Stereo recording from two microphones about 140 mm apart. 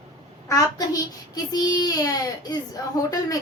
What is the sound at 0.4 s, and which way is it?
A child's voice, 25° left (ahead or behind).